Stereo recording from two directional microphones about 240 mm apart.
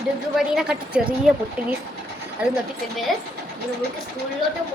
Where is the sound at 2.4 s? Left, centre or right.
Centre.